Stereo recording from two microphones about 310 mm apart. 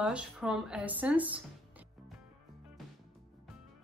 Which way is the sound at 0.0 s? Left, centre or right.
Centre.